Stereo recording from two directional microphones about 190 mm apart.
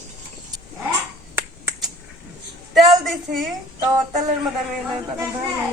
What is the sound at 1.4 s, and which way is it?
Finger snapping, 15° right (ahead or behind).